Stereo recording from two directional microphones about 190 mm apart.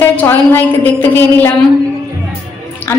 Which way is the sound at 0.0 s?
10° left (ahead or behind).